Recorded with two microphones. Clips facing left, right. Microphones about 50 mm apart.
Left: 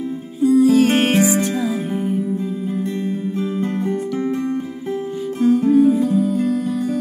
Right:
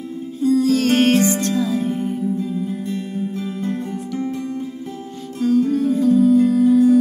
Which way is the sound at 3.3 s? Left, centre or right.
Left.